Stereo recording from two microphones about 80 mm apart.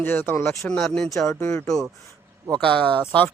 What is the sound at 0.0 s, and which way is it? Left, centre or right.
Speech, left.